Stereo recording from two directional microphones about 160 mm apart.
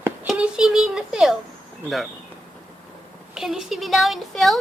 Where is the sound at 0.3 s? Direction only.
5° right (ahead or behind).